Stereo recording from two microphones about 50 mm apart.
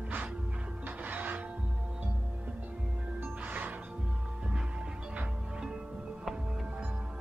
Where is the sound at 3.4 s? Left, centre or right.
Right.